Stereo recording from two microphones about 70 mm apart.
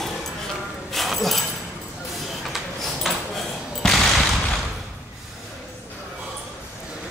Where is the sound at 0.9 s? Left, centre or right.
Centre.